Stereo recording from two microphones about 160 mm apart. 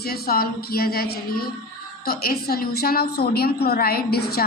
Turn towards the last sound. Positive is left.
turn(degrees=80)